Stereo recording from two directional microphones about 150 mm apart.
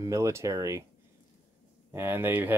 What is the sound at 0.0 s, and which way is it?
Speech, 20° right (ahead or behind).